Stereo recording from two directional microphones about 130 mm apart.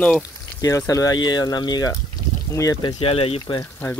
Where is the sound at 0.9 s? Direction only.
25° left (ahead or behind).